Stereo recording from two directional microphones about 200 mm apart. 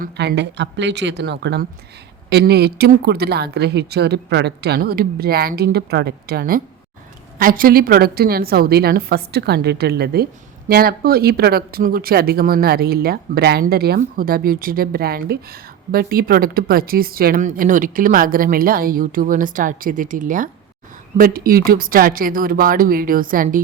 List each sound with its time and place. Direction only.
0.0 s a woman's voice: 55° right (ahead or behind)